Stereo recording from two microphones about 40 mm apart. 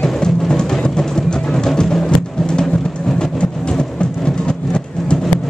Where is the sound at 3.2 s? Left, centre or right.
Left.